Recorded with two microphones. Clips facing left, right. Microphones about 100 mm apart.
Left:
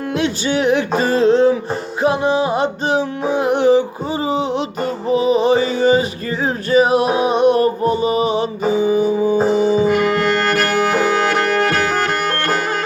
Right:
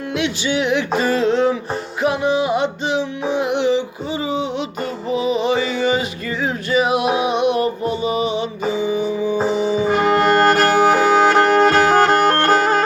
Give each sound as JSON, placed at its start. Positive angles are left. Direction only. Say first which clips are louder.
{"t": 0.1, "sound": "music", "louder": "left 2 dB", "side_deg": 40}
{"t": 9.9, "sound": "music", "louder": "right 1 dB", "side_deg": -25}